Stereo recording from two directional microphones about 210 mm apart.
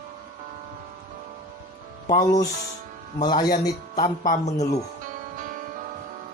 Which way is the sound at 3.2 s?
20° left (ahead or behind).